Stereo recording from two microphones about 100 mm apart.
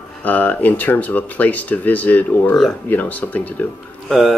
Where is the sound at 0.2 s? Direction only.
15° left (ahead or behind).